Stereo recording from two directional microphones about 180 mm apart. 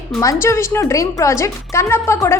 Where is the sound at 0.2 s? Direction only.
15° left (ahead or behind).